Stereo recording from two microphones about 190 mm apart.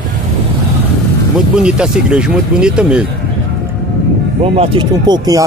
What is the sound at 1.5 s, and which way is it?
Speech, 5° right (ahead or behind).